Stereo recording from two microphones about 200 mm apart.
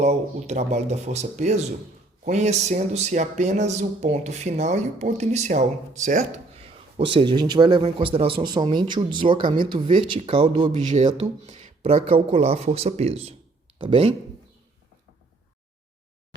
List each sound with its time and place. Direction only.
0.0 s speech: 35° right (ahead or behind)
6.7 s a man's voice: 25° right (ahead or behind)
10.7 s speech: 40° right (ahead or behind)